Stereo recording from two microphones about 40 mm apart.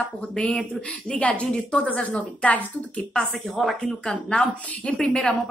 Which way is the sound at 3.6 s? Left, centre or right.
Centre.